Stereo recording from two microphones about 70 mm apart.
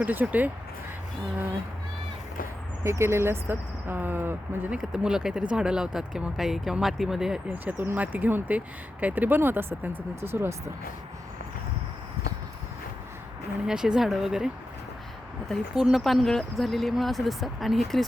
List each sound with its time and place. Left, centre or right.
0.0 s speech: right
2.8 s speech: right
4.8 s speech: centre
7.4 s speech: right
13.7 s speech: centre
15.7 s speech: centre